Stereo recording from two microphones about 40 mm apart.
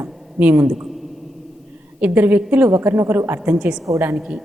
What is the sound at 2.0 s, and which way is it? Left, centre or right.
Speech, right.